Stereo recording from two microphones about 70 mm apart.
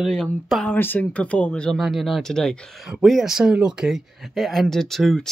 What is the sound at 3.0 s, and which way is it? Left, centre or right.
Speech, centre.